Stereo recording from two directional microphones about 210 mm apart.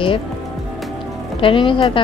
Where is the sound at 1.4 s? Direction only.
25° left (ahead or behind).